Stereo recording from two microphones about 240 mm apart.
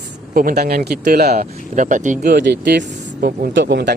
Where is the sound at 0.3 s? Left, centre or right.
Right.